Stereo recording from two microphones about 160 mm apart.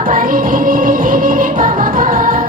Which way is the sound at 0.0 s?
60° right (ahead or behind).